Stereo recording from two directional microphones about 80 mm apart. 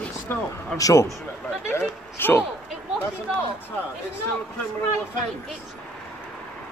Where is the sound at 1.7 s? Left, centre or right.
Left.